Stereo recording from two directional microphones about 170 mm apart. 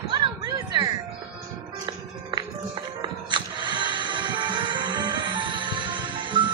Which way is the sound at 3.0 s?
25° right (ahead or behind).